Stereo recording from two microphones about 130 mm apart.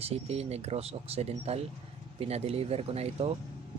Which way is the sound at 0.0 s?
50° right (ahead or behind).